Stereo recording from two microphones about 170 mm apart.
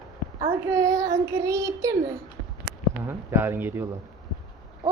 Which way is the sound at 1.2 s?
15° right (ahead or behind).